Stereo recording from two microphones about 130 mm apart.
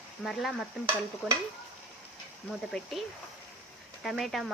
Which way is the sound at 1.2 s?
Centre (ahead or behind).